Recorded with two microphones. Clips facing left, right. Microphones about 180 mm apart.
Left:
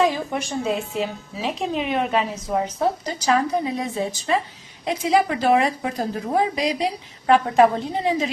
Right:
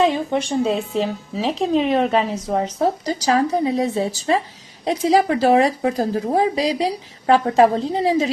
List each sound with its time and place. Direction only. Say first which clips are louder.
0.0 s a woman's voice: right 3 dB; 25° right (ahead or behind)